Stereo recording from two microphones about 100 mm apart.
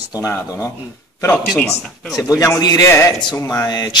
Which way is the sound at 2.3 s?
35° left (ahead or behind).